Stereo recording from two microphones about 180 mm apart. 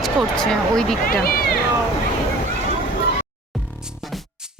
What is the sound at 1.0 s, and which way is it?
Cat, 55° left (ahead or behind).